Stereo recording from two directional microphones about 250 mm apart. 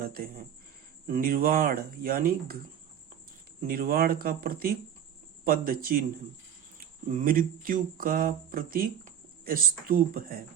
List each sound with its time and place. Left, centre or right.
0.0 s speech: right
3.7 s speech: right